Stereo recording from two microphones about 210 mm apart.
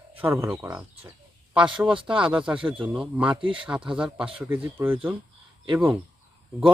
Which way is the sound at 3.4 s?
25° right (ahead or behind).